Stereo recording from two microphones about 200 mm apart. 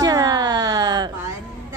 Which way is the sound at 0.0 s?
20° right (ahead or behind).